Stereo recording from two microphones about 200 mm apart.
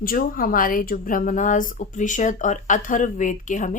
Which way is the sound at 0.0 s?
45° left (ahead or behind).